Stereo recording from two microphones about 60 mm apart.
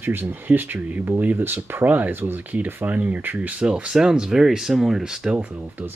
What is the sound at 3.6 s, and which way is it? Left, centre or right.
Speech, centre.